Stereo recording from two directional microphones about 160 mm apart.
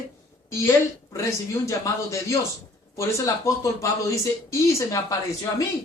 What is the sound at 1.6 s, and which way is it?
A man's voice, 20° left (ahead or behind).